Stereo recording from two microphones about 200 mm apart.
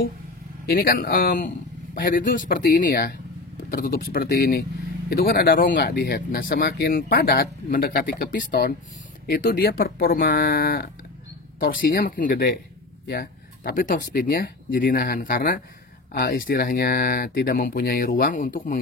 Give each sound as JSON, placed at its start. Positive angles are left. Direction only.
{"t": 0.7, "sound": "speech", "side_deg": 50}
{"t": 13.0, "sound": "a sound", "side_deg": 50}
{"t": 14.1, "sound": "speech", "side_deg": 50}